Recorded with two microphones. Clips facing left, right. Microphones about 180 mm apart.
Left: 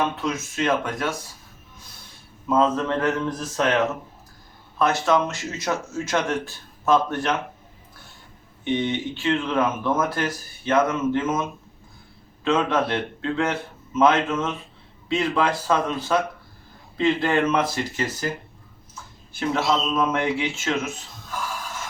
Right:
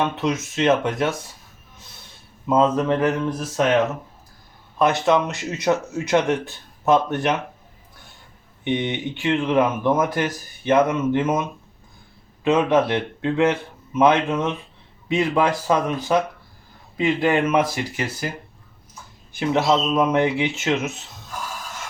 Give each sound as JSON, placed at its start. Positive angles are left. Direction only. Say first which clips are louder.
{"t": 0.2, "sound": "speech", "louder": "right 4 dB", "side_deg": -20}
{"t": 2.5, "sound": "speech", "louder": "right 3 dB", "side_deg": -20}
{"t": 4.8, "sound": "speech", "louder": "right 2 dB", "side_deg": -20}
{"t": 8.6, "sound": "speech", "louder": "even", "side_deg": -15}
{"t": 12.5, "sound": "speech", "louder": "right 4 dB", "side_deg": -15}
{"t": 19.3, "sound": "speech", "louder": "right 4 dB", "side_deg": -20}